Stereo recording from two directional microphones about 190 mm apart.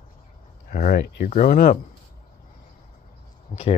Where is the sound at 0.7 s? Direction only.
50° left (ahead or behind).